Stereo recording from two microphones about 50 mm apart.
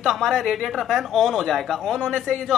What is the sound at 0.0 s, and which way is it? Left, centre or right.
A woman's voice, centre.